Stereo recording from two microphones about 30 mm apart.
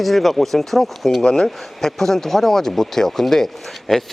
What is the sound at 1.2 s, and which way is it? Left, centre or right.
Speech, centre.